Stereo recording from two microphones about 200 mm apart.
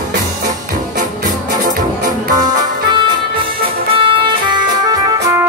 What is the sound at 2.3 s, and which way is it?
Music, 20° right (ahead or behind).